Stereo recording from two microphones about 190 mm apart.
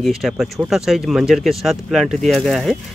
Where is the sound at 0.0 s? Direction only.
Centre (ahead or behind).